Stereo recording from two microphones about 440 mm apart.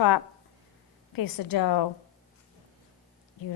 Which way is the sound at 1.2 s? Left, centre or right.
Left.